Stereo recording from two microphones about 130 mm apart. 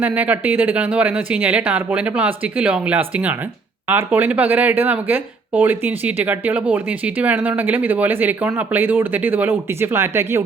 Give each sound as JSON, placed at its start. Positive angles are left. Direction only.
{"t": 0.0, "sound": "speech", "side_deg": -15}